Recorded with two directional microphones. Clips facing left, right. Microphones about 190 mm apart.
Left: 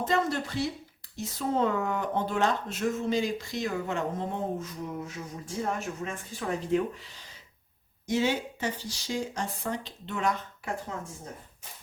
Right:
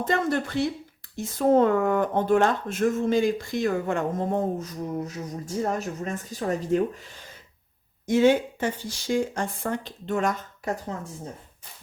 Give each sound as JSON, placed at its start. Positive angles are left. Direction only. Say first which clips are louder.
{"t": 0.1, "sound": "speech", "louder": "right 4 dB", "side_deg": -55}
{"t": 8.0, "sound": "speech", "louder": "right 8 dB", "side_deg": -50}